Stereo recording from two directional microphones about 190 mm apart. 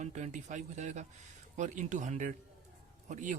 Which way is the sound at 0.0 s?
40° right (ahead or behind).